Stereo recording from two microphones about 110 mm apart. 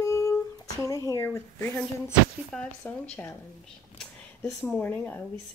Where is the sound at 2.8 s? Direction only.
15° left (ahead or behind).